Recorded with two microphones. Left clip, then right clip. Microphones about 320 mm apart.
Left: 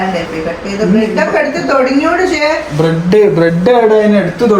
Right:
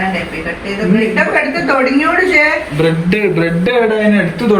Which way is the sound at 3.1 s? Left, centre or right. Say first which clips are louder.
Left 6 dB; left.